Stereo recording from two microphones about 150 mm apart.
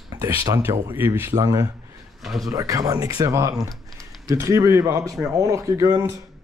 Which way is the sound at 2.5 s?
20° right (ahead or behind).